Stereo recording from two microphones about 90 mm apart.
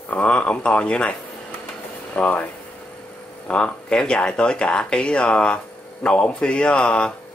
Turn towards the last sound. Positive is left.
turn(degrees=10)  # may be behind; listen again after turning